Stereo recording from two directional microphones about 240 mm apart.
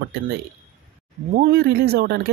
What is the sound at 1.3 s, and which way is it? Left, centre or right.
Speech, right.